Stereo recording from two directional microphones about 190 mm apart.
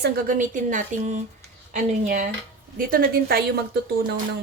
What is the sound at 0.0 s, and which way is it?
A woman's voice, 45° right (ahead or behind).